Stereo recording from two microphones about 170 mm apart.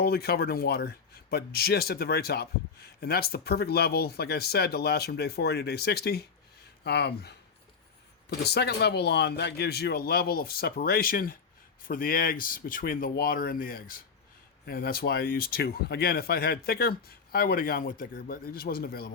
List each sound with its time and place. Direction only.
0.0 s speech: 65° left (ahead or behind)